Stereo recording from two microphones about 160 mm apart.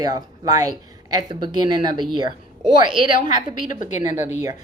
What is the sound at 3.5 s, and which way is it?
Speech, 55° left (ahead or behind).